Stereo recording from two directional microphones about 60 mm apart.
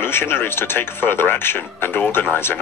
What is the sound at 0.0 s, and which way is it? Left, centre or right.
Speech, left.